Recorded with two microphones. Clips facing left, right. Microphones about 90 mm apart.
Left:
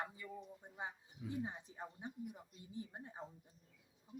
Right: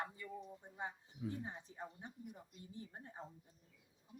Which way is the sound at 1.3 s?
15° left (ahead or behind).